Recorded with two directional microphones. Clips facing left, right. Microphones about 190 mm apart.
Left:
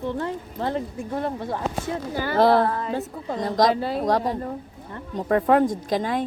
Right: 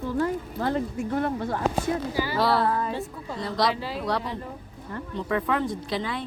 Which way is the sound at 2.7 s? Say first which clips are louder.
Right 1 dB; 30° left (ahead or behind).